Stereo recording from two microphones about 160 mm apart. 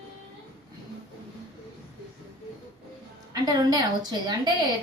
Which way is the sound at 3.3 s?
25° right (ahead or behind).